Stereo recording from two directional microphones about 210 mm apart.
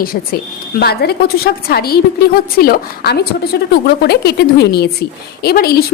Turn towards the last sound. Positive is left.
turn(degrees=50)  # may be behind; listen again after turning